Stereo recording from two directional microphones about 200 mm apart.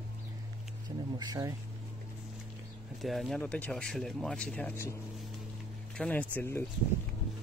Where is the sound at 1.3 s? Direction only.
15° right (ahead or behind).